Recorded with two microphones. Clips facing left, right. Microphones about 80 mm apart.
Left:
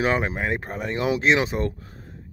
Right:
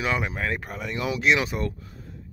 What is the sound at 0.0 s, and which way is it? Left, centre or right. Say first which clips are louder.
Speech: left 4 dB; left.